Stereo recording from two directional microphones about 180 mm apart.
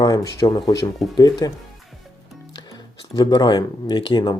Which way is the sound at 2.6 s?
20° left (ahead or behind).